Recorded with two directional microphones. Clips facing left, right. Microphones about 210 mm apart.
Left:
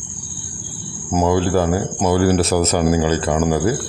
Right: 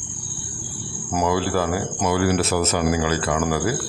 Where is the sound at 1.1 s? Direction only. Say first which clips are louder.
Left 5 dB; 25° left (ahead or behind); by 2.8 s 40° left (ahead or behind).